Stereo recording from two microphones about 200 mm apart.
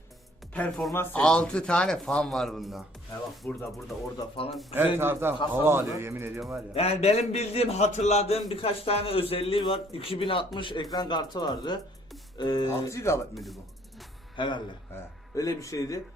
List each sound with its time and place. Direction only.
0.5 s speech: 5° left (ahead or behind)
4.2 s a man's voice: 25° left (ahead or behind)
4.9 s speech: 10° right (ahead or behind)
6.7 s a man's voice: 30° left (ahead or behind); by 13.2 s 15° left (ahead or behind)
13.3 s speech: centre (ahead or behind)
14.3 s a man's voice: 25° left (ahead or behind)